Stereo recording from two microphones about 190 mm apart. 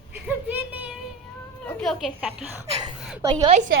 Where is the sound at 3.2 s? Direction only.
20° right (ahead or behind).